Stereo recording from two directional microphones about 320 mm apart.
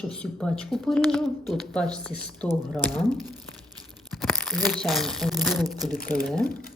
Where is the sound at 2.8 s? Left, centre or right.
Centre.